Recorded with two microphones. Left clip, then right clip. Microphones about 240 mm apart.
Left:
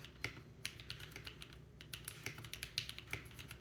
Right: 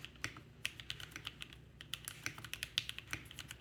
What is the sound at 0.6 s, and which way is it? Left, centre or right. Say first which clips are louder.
Typing: right 5 dB; centre.